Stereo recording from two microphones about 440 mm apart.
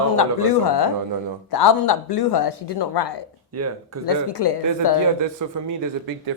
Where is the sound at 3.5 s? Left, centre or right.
Right.